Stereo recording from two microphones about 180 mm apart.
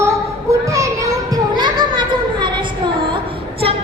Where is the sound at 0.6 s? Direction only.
15° right (ahead or behind).